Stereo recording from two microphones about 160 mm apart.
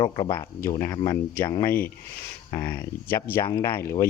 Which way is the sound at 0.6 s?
15° left (ahead or behind).